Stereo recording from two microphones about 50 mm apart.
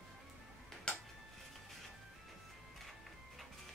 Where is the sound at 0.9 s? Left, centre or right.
Centre.